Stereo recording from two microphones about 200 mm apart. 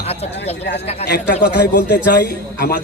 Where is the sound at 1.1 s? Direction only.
55° left (ahead or behind).